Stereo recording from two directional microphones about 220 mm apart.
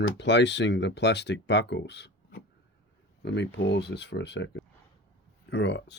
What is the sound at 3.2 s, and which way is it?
Speech, 50° left (ahead or behind).